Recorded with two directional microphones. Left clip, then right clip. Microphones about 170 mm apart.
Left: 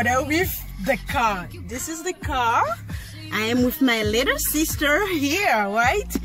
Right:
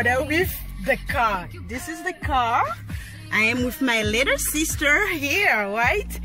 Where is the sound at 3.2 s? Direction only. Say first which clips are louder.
Right 1 dB; 25° left (ahead or behind).